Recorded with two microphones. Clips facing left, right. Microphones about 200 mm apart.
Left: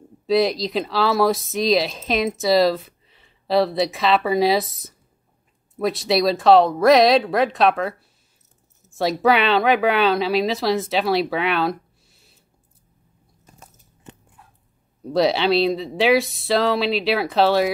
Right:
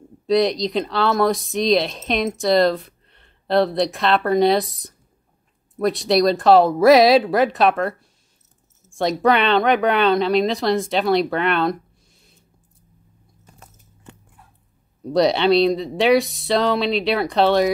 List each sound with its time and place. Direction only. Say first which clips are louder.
0.3 s speech: right 1 dB; centre (ahead or behind)
8.9 s speech: even; 5° left (ahead or behind)
14.1 s dog: left 1 dB; 20° left (ahead or behind)
15.0 s speech: right 2 dB; centre (ahead or behind)